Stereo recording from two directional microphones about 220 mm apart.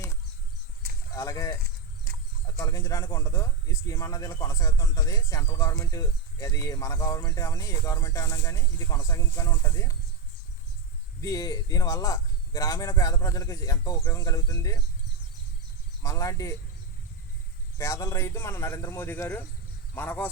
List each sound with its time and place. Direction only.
1.1 s speech: 15° left (ahead or behind)
2.1 s horse: 40° right (ahead or behind)
2.6 s speech: 15° left (ahead or behind)
11.2 s speech: 15° left (ahead or behind)
16.0 s speech: 15° left (ahead or behind)
17.7 s speech: 15° left (ahead or behind)